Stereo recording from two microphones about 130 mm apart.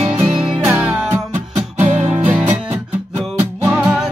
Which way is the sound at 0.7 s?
10° right (ahead or behind).